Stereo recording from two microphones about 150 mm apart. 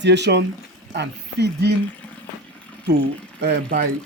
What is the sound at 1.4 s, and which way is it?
Speech, 90° right.